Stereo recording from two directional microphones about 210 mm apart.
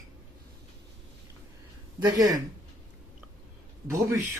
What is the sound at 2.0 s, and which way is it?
Speech, 20° right (ahead or behind).